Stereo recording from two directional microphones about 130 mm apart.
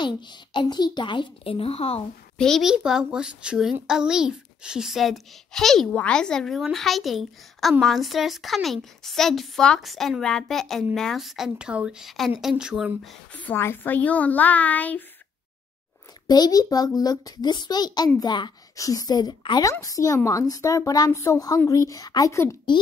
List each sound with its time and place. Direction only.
0.0 s a woman's voice: 35° left (ahead or behind)
2.3 s a child's voice: 5° left (ahead or behind)
13.3 s a woman's voice: 15° left (ahead or behind)
16.3 s a child's voice: 30° left (ahead or behind)